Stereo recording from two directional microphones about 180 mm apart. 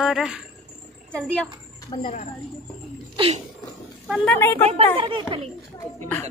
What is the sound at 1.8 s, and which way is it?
Speech, 40° left (ahead or behind).